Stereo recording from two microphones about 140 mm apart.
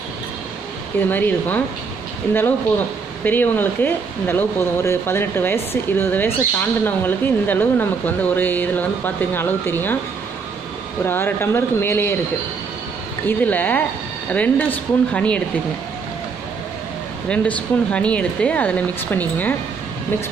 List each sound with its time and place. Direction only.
1.0 s speech: 15° left (ahead or behind)
3.3 s speech: 15° left (ahead or behind)
11.1 s speech: 15° left (ahead or behind)
13.3 s speech: 10° left (ahead or behind)
17.3 s speech: 10° left (ahead or behind)